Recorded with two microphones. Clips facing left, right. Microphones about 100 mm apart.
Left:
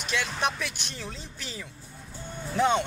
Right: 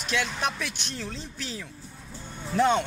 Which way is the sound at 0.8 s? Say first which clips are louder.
Right 3 dB; 10° left (ahead or behind).